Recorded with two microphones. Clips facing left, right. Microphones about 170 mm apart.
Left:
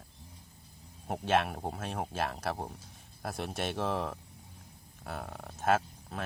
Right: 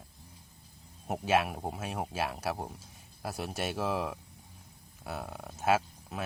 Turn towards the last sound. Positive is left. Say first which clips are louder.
# right 1 dB
turn(degrees=-10)  # may be behind; listen again after turning